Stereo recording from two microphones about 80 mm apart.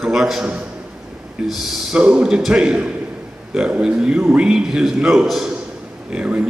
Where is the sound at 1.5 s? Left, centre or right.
Centre.